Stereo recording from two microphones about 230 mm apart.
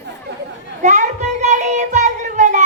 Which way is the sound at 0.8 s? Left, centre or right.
Right.